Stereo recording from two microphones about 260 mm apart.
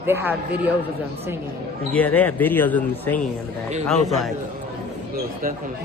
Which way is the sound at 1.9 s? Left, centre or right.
Centre.